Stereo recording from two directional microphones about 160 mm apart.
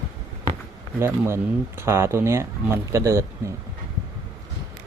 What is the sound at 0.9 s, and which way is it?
Speech, 15° right (ahead or behind).